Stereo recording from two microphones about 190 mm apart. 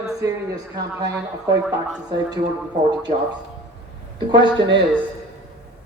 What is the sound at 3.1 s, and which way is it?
Speech, 35° right (ahead or behind).